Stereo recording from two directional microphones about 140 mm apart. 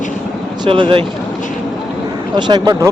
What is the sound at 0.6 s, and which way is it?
Speech, 35° right (ahead or behind).